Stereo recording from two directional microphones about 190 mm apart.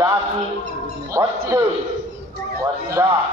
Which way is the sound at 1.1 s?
15° right (ahead or behind).